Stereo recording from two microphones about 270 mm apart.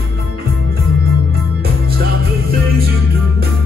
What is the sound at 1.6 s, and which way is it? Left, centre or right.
Music, right.